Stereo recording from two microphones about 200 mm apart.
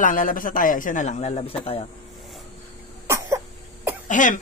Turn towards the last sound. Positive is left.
turn(degrees=40)  # may be behind; listen again after turning